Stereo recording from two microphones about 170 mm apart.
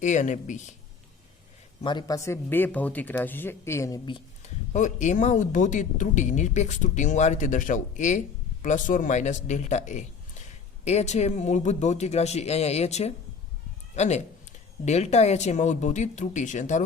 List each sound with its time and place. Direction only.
0.0 s speech: 45° left (ahead or behind)
1.8 s speech: 25° left (ahead or behind)
4.4 s speech: 45° left (ahead or behind)